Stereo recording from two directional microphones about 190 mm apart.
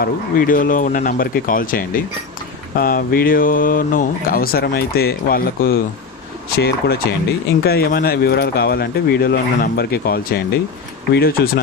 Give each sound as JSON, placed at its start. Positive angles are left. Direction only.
{"t": 0.0, "sound": "speech", "side_deg": 45}